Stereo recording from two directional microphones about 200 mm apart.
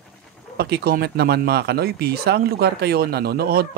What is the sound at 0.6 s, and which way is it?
Speech, 55° right (ahead or behind).